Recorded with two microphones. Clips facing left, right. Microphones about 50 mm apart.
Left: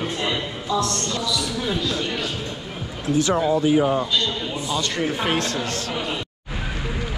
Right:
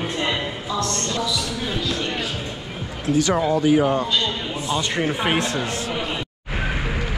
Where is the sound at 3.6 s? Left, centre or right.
Right.